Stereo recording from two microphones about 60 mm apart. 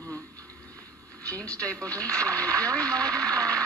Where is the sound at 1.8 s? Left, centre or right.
Right.